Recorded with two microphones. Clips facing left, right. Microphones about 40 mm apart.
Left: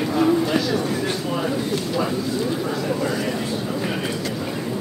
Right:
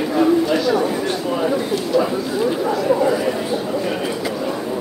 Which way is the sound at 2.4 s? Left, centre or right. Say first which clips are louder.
Right 5 dB; centre.